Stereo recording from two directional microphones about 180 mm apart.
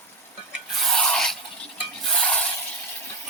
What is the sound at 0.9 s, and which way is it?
Filing, 5° left (ahead or behind).